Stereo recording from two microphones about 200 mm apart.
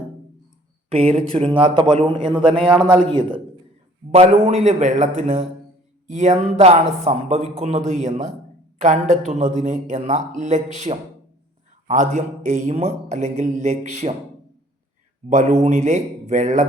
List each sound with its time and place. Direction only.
0.9 s a man's voice: 30° right (ahead or behind)
15.3 s speech: 35° right (ahead or behind)